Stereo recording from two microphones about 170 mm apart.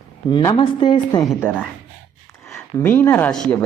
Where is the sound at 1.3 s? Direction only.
10° left (ahead or behind).